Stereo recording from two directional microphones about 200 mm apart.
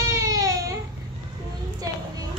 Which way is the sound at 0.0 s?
15° right (ahead or behind).